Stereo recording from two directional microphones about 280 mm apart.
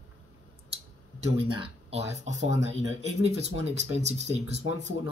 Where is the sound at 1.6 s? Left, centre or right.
Right.